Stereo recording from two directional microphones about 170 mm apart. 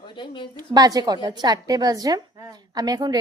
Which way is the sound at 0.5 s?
25° right (ahead or behind).